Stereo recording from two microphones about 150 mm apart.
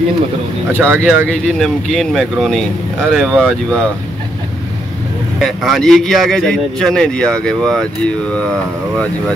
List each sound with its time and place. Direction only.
0.7 s speech: 15° right (ahead or behind)
1.0 s speech: 5° left (ahead or behind)
5.4 s speech: centre (ahead or behind)